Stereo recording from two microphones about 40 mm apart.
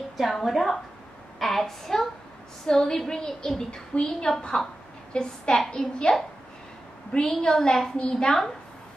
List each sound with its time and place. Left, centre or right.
0.2 s a woman's voice: centre; by 4.3 s left
4.6 s a woman's voice: centre
5.1 s a woman's voice: left
5.8 s a woman's voice: centre
7.1 s a woman's voice: centre